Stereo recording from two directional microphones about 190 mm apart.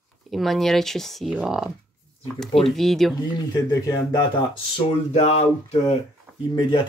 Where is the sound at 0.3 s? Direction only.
Centre (ahead or behind).